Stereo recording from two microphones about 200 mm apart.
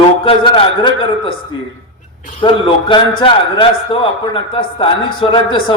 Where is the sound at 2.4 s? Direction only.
25° left (ahead or behind).